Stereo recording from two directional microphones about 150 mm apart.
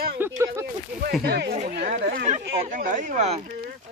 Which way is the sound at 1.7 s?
80° right.